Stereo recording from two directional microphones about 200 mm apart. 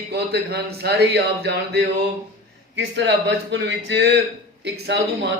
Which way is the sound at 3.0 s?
60° right (ahead or behind).